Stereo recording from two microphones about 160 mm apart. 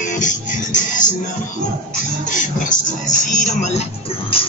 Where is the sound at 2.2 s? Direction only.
55° left (ahead or behind).